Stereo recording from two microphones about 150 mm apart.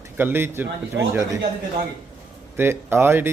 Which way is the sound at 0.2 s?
15° right (ahead or behind).